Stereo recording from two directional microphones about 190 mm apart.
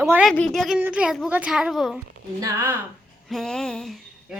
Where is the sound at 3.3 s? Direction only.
Centre (ahead or behind).